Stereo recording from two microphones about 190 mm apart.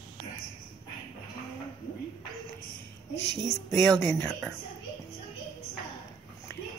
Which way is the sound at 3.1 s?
65° left (ahead or behind).